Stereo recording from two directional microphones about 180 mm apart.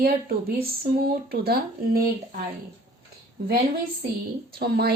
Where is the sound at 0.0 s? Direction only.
55° right (ahead or behind).